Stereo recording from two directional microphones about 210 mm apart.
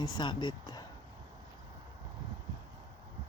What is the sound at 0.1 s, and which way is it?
Speech, 20° left (ahead or behind).